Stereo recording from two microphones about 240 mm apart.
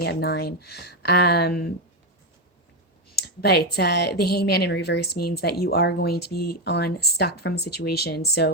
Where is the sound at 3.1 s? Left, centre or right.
Left.